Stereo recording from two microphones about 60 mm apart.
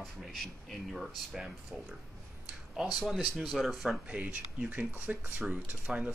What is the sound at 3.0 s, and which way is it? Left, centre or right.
Speech, centre.